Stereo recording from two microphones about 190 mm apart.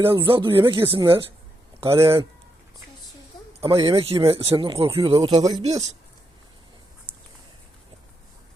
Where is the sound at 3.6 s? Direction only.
30° right (ahead or behind).